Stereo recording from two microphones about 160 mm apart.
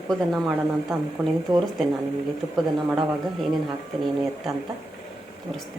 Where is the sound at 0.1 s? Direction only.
Centre (ahead or behind).